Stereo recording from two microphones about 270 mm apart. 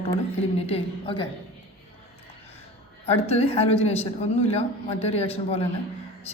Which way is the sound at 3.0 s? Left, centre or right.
Left.